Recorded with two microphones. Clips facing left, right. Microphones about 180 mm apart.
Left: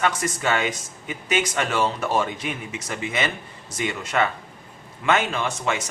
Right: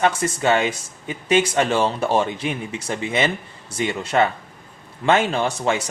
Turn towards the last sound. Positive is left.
turn(degrees=-30)  # may be behind; listen again after turning